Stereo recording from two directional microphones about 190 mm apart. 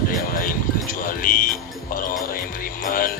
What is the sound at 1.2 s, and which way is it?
Music, 45° left (ahead or behind).